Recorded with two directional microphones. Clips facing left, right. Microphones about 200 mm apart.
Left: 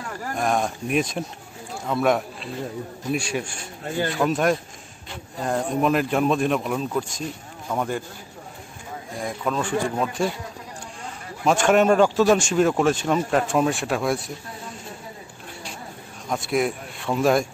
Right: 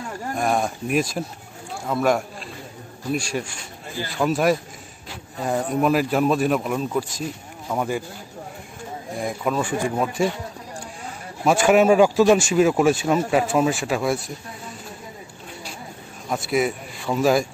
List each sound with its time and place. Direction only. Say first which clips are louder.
0.4 s speech: right 1 dB; 5° right (ahead or behind)
9.2 s speech: right 2 dB; 10° right (ahead or behind)
11.4 s speech: right 2 dB; 5° right (ahead or behind)
16.3 s speech: right 1 dB; centre (ahead or behind)